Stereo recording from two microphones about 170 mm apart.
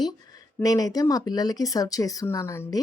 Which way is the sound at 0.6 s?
20° left (ahead or behind).